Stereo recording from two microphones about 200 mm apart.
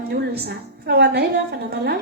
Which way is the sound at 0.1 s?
50° right (ahead or behind).